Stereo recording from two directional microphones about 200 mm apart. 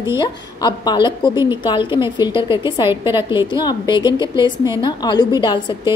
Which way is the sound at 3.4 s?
20° left (ahead or behind).